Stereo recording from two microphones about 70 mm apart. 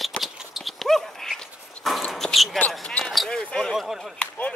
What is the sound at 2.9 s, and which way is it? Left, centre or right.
Basketball bounce, centre.